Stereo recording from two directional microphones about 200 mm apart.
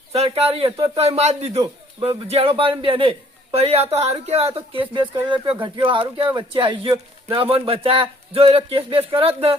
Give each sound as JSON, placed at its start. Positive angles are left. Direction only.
{"t": 0.1, "sound": "a man's voice", "side_deg": -30}